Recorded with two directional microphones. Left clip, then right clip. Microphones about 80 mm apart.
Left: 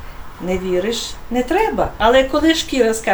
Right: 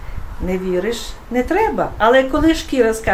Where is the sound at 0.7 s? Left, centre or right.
Right.